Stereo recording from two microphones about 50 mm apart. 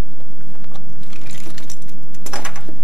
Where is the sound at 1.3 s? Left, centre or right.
Centre.